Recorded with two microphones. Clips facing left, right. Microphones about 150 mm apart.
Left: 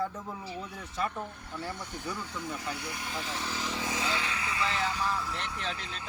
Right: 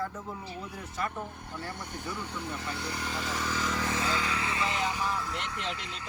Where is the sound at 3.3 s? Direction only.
90° right.